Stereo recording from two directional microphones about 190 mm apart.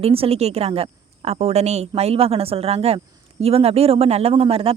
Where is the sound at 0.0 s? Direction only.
30° right (ahead or behind).